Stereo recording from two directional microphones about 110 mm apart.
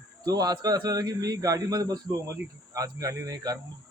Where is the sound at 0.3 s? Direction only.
35° right (ahead or behind).